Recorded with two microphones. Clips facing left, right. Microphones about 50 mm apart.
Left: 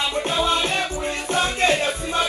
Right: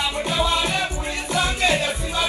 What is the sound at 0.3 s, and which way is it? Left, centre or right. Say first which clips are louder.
Music: even; left.